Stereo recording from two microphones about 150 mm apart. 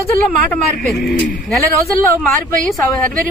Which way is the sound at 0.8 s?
Centre (ahead or behind).